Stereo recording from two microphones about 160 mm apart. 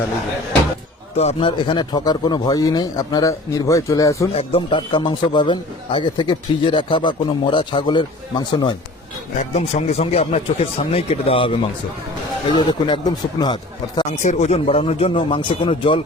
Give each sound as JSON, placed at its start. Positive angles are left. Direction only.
{"t": 1.1, "sound": "a man's voice", "side_deg": 40}
{"t": 4.4, "sound": "a man's voice", "side_deg": 35}
{"t": 9.4, "sound": "a man's voice", "side_deg": 45}
{"t": 14.2, "sound": "speech", "side_deg": 45}